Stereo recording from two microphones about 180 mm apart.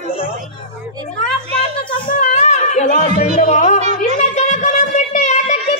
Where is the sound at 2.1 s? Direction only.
40° left (ahead or behind).